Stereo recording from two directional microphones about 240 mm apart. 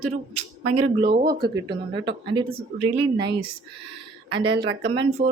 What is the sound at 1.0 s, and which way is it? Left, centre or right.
Speech, right.